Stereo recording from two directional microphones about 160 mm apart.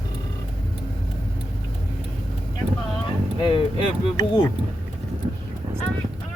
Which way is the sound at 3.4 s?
35° left (ahead or behind).